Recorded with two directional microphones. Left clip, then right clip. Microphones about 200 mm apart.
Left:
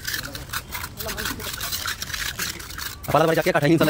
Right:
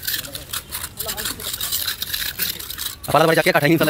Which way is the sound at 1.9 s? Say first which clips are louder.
Right 3 dB; 25° right (ahead or behind).